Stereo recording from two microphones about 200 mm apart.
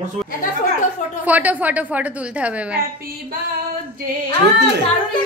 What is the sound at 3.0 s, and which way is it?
Music, 45° right (ahead or behind).